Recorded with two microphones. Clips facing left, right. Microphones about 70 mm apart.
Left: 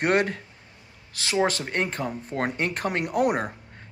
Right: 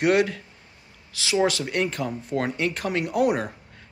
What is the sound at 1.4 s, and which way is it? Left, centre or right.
Speech, left.